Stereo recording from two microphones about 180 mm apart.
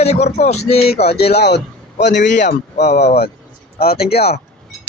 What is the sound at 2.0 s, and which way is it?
Speech, 75° left (ahead or behind).